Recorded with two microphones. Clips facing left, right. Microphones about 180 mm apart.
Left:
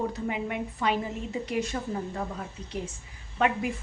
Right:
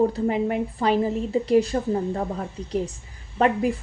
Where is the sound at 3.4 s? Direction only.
35° right (ahead or behind).